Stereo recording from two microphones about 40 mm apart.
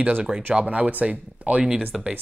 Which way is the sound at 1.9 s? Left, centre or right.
Centre.